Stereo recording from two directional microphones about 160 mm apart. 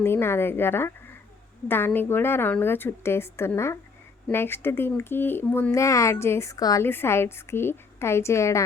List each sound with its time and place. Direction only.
0.0 s a woman's voice: 15° left (ahead or behind)